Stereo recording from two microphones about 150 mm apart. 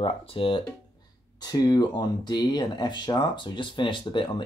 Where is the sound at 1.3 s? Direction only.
25° left (ahead or behind).